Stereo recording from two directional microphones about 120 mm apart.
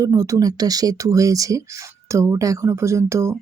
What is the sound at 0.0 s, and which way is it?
Speech, 30° right (ahead or behind).